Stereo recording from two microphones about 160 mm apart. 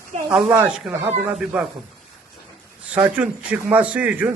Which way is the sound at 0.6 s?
10° right (ahead or behind).